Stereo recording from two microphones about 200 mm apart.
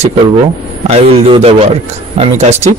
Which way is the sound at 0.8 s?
30° right (ahead or behind).